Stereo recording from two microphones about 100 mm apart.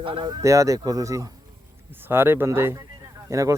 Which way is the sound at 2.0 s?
20° right (ahead or behind).